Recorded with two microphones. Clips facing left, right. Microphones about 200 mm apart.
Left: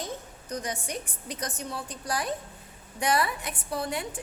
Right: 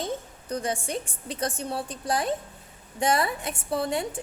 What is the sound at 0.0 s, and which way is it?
A woman's voice, 30° right (ahead or behind).